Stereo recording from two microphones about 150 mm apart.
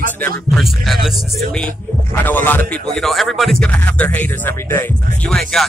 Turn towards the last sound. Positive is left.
turn(degrees=5)  # may be behind; listen again after turning